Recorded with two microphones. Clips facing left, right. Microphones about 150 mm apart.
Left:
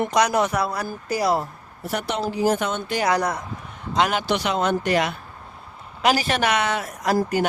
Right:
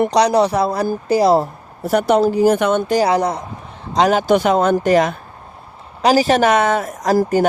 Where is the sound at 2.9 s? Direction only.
35° right (ahead or behind).